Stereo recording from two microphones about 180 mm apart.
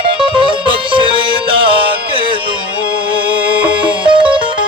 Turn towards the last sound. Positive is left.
turn(degrees=-25)  # may be behind; listen again after turning